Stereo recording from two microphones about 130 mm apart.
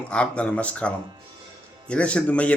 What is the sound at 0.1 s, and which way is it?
A man's voice, 10° left (ahead or behind).